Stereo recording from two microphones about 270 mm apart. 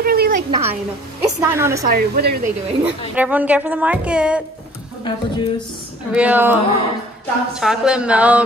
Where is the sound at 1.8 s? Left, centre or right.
Right.